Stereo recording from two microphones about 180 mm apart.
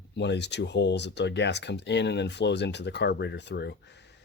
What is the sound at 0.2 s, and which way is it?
Speech, 75° left (ahead or behind).